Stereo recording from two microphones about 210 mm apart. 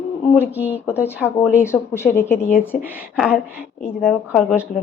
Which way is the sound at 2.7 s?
40° left (ahead or behind).